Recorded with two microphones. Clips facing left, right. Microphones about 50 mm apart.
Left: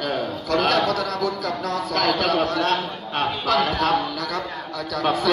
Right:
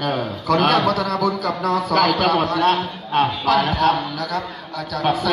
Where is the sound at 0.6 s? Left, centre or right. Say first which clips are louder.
Right 2 dB; right.